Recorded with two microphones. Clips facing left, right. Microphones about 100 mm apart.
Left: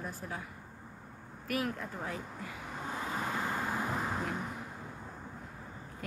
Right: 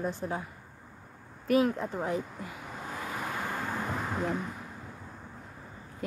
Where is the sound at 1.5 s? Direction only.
20° right (ahead or behind).